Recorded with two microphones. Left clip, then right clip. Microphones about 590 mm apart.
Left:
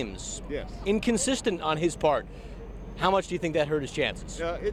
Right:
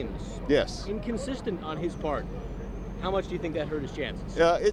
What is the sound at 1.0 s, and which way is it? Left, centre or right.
Speech, left.